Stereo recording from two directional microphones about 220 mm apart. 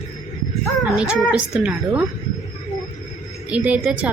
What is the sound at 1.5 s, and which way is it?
Speech, centre (ahead or behind).